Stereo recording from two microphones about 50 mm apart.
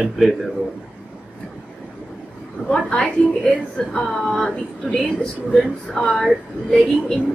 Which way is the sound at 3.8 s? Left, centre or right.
Centre.